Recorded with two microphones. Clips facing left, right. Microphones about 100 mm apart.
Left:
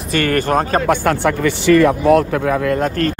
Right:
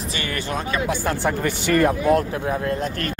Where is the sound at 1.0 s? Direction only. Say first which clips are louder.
Left 6 dB; 80° left.